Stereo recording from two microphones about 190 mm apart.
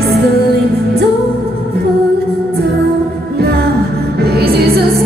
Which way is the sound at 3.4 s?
55° right (ahead or behind).